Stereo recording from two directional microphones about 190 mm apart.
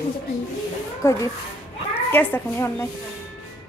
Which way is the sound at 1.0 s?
15° left (ahead or behind).